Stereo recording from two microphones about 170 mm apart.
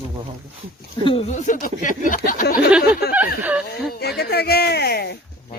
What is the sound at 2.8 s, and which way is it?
Speech, 65° left (ahead or behind).